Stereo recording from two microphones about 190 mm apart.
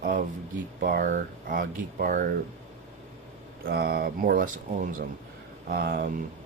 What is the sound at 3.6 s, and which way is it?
Speech, 55° right (ahead or behind).